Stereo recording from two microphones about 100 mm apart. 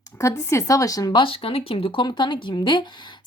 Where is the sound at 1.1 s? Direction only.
60° left (ahead or behind).